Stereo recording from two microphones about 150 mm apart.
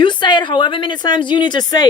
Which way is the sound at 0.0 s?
30° left (ahead or behind).